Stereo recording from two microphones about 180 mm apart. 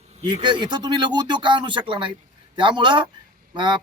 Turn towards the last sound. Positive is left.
turn(degrees=-25)  # may be behind; listen again after turning